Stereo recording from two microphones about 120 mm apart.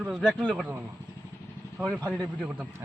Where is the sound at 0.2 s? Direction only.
5° left (ahead or behind).